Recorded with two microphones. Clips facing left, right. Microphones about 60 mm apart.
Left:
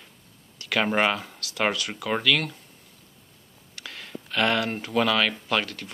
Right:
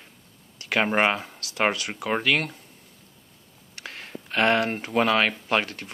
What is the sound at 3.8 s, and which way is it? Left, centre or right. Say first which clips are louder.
Speech: right 1 dB; right.